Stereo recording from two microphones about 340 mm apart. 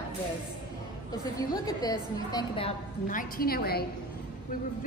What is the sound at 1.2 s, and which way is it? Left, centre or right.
A woman's voice, centre.